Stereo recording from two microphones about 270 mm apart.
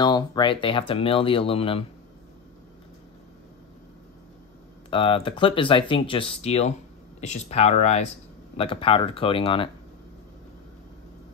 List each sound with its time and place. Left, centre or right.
0.0 s speech: centre
4.9 s speech: centre